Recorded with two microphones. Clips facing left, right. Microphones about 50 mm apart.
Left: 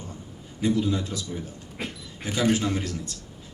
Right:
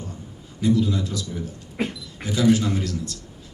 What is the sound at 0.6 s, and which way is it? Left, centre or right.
Speech, left.